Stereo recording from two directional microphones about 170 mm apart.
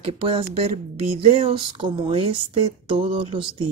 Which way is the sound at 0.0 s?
30° right (ahead or behind).